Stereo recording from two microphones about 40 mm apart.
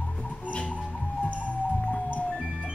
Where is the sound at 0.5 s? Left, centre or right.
Left.